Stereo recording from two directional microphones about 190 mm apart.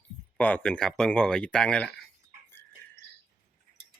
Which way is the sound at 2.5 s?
10° left (ahead or behind).